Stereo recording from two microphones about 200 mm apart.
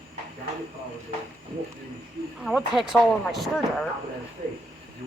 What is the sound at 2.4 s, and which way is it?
Speech, centre (ahead or behind).